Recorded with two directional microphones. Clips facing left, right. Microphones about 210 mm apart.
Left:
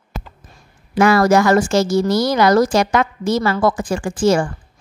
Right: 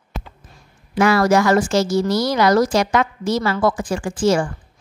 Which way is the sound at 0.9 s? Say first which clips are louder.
Left 2 dB; 45° left (ahead or behind).